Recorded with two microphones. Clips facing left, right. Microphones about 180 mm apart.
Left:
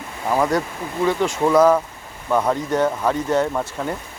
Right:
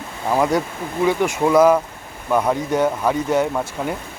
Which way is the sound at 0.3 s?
10° right (ahead or behind).